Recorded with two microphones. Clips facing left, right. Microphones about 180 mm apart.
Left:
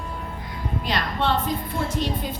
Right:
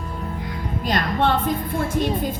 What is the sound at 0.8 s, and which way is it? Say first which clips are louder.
A woman's voice: right 4 dB; 50° right (ahead or behind).